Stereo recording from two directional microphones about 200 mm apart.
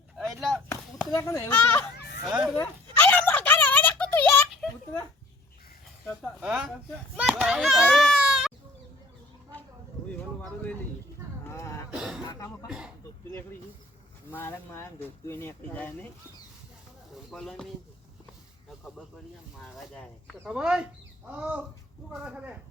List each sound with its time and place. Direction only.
0.3 s chop: centre (ahead or behind)
0.7 s speech: 15° left (ahead or behind)
2.2 s speech: 5° right (ahead or behind)
2.6 s a sound: 10° left (ahead or behind)
6.4 s a child's voice: 5° right (ahead or behind)
11.4 s a sound: 15° left (ahead or behind)
11.9 s cough: 5° right (ahead or behind)
12.2 s cough: 20° left (ahead or behind)
12.6 s speech: 5° right (ahead or behind)
14.3 s speech: 10° left (ahead or behind)
17.3 s speech: centre (ahead or behind)
19.6 s speech: 5° left (ahead or behind)